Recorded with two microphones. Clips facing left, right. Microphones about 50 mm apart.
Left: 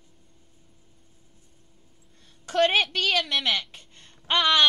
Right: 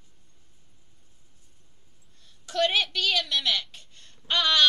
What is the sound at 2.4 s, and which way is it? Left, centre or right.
Speech, left.